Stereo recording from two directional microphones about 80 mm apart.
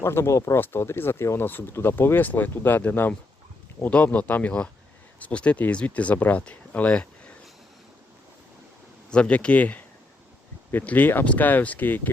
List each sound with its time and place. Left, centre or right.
0.0 s speech: left; by 7.1 s centre
9.0 s speech: centre